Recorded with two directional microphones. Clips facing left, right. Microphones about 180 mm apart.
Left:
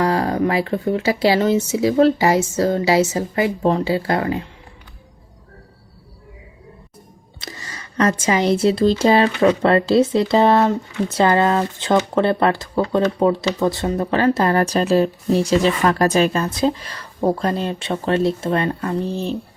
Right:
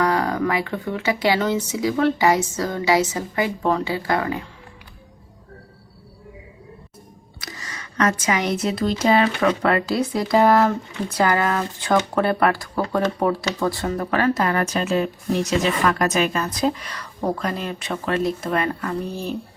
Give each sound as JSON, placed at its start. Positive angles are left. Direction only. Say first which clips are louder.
{"t": 0.0, "sound": "speech", "louder": "left 2 dB", "side_deg": 30}
{"t": 7.3, "sound": "speech", "louder": "left 2 dB", "side_deg": 25}